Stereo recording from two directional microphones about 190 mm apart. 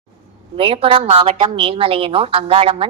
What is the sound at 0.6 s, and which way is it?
A woman's voice, 30° right (ahead or behind).